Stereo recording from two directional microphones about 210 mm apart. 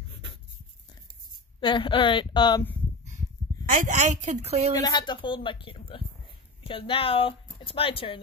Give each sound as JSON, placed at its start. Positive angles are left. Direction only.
{"t": 1.6, "sound": "speech", "side_deg": 20}
{"t": 3.7, "sound": "a woman's voice", "side_deg": -35}
{"t": 4.7, "sound": "speech", "side_deg": 20}